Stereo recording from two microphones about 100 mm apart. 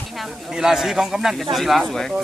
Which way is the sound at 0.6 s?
5° right (ahead or behind).